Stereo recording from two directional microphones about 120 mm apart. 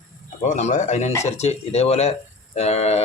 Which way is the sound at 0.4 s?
90° left.